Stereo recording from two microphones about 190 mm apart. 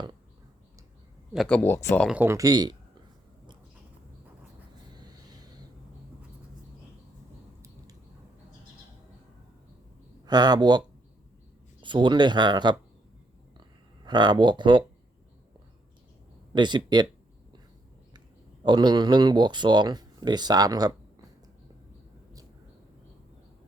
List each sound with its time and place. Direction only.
1.3 s speech: 5° left (ahead or behind)
2.0 s speech: 10° right (ahead or behind)
4.9 s vehicle: 20° right (ahead or behind)
10.2 s speech: 20° right (ahead or behind)
14.0 s speech: 25° right (ahead or behind)
16.5 s speech: 25° right (ahead or behind)
18.6 s speech: 25° right (ahead or behind)